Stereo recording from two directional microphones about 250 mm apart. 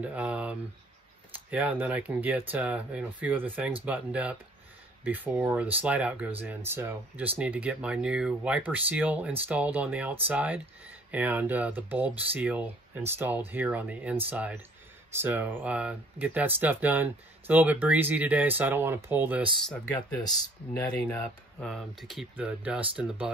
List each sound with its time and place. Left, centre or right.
0.0 s speech: centre
19.7 s speech: centre